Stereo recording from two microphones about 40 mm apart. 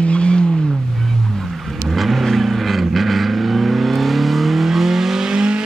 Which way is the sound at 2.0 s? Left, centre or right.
Centre.